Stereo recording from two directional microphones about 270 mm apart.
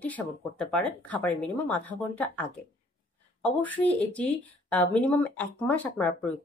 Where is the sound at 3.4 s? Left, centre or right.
Centre.